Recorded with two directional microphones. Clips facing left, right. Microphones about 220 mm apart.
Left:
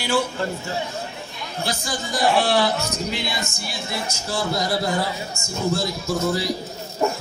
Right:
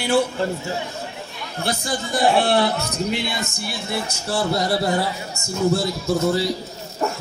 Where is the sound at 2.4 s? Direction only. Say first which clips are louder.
Right 1 dB; 55° right (ahead or behind).